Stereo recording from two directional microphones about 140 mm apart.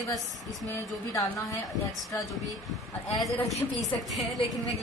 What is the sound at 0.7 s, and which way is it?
A woman's voice, 25° left (ahead or behind).